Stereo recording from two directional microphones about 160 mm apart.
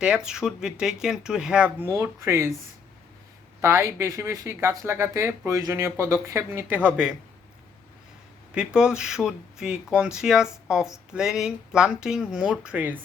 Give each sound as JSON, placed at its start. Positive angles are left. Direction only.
{"t": 0.0, "sound": "speech", "side_deg": -5}
{"t": 3.6, "sound": "speech", "side_deg": -15}
{"t": 8.5, "sound": "speech", "side_deg": -5}